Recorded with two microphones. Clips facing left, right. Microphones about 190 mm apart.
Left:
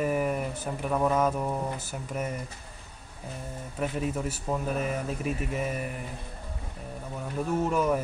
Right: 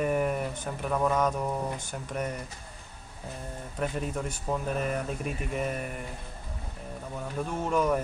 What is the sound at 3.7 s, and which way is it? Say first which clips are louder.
Speech: left 2 dB; 5° left (ahead or behind).